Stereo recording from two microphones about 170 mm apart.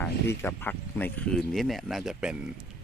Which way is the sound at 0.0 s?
15° left (ahead or behind).